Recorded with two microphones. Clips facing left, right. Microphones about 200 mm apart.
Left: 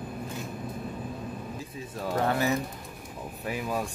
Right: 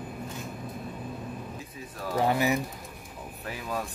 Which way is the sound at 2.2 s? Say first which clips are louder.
Right 2 dB; 15° right (ahead or behind).